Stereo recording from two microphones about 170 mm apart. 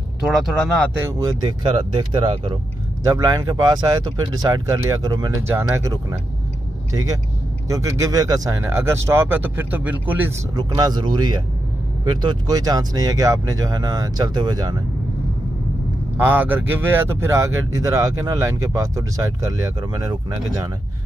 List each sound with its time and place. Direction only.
0.3 s speech: centre (ahead or behind)
0.9 s speech: 15° right (ahead or behind)
10.5 s speech: 25° right (ahead or behind)
16.2 s speech: 10° right (ahead or behind)